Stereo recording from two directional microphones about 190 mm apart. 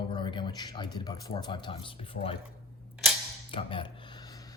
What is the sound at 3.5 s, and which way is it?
Speech, 25° left (ahead or behind).